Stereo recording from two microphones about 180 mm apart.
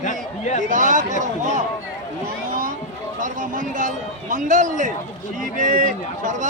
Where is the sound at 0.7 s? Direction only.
45° right (ahead or behind).